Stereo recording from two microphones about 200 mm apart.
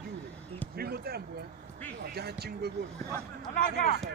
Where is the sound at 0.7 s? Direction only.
50° right (ahead or behind).